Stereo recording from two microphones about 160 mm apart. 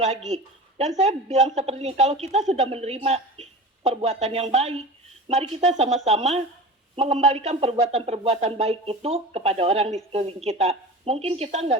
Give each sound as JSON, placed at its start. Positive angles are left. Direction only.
{"t": 0.0, "sound": "a woman's voice", "side_deg": -45}